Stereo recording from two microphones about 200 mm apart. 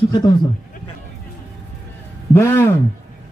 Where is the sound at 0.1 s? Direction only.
20° left (ahead or behind).